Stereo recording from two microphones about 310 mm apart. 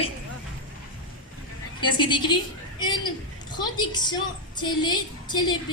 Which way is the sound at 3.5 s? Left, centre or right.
Centre.